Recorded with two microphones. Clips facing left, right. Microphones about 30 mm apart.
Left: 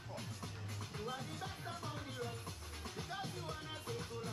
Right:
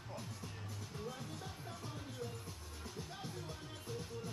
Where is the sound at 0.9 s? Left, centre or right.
Left.